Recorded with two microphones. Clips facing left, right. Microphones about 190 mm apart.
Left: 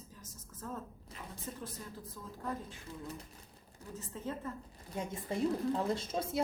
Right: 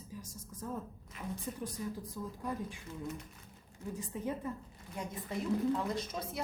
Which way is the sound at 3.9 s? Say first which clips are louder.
Right 2 dB; 15° right (ahead or behind).